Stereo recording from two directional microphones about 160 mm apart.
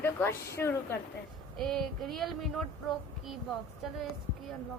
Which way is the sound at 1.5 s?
Centre (ahead or behind).